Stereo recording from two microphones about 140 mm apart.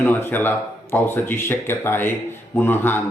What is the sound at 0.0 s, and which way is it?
Speech, 15° left (ahead or behind).